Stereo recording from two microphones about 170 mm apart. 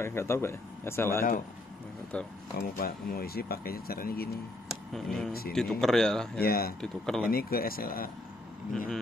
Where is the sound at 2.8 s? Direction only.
65° left (ahead or behind).